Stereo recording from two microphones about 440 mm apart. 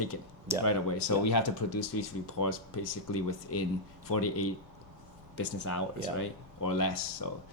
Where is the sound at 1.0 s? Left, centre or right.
Left.